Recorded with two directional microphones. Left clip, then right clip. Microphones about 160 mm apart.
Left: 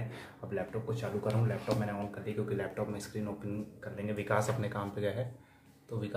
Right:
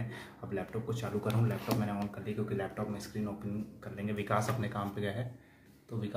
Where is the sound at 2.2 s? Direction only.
10° left (ahead or behind).